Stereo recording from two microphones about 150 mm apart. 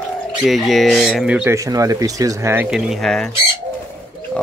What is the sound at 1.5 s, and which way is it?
Speech, 20° right (ahead or behind).